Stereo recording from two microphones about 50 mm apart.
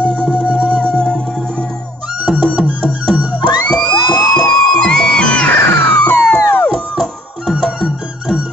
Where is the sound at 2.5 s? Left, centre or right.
Right.